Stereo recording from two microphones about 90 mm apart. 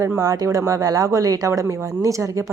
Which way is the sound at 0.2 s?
40° right (ahead or behind).